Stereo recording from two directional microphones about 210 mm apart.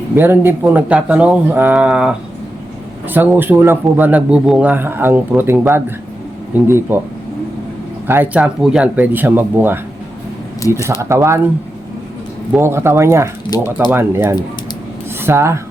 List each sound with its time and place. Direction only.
0.2 s a man's voice: 10° right (ahead or behind)
8.0 s a man's voice: 10° right (ahead or behind)
12.5 s a man's voice: 10° right (ahead or behind)
13.5 s speech: 20° left (ahead or behind)
13.9 s a man's voice: 10° right (ahead or behind)